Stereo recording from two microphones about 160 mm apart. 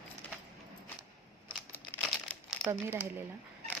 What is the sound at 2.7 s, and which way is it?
Speech, 15° right (ahead or behind).